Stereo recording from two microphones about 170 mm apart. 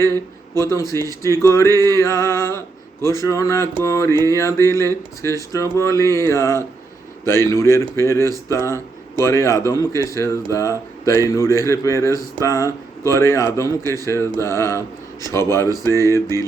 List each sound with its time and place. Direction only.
0.1 s a man's voice: 20° right (ahead or behind)
0.7 s speech: 20° left (ahead or behind)
12.6 s speech: 15° right (ahead or behind)
13.1 s speech: 15° left (ahead or behind)